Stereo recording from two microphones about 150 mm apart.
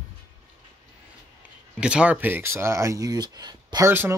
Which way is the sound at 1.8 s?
5° right (ahead or behind).